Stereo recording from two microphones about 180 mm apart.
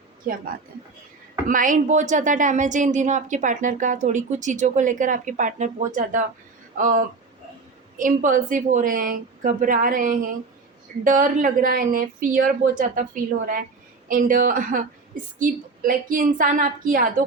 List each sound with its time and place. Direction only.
1.5 s a woman's voice: 50° right (ahead or behind)